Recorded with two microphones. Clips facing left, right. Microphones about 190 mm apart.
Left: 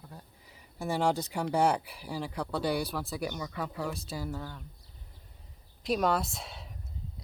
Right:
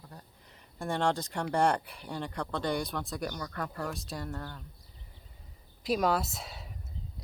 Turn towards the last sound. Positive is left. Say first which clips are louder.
# left 1 dB
turn(degrees=0)  # may be behind; listen again after turning